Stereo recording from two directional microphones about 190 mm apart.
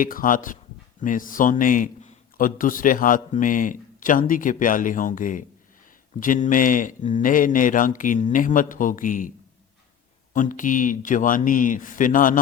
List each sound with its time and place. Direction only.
0.0 s a man's voice: 45° left (ahead or behind)
10.3 s a man's voice: 45° left (ahead or behind)